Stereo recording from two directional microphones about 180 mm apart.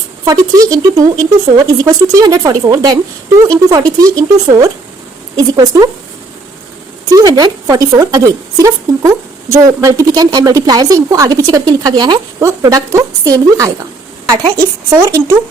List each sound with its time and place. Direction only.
0.3 s a woman's voice: 20° right (ahead or behind)
7.1 s a woman's voice: 20° right (ahead or behind)
14.8 s speech: 15° right (ahead or behind)